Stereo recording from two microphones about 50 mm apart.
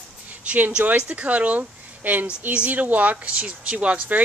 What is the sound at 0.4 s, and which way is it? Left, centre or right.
Speech, right.